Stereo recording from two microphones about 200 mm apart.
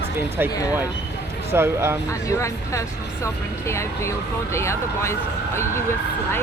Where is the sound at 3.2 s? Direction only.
15° left (ahead or behind).